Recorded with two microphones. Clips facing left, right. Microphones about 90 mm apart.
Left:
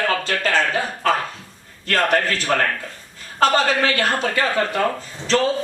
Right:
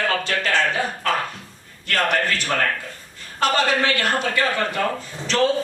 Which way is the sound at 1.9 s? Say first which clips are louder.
Left 2 dB; 35° left (ahead or behind).